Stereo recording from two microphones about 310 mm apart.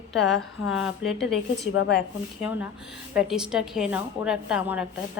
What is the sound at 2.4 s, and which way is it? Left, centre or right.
A woman's voice, centre.